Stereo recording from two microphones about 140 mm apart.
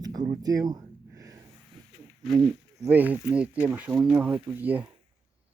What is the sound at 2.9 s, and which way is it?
Speech, 10° right (ahead or behind).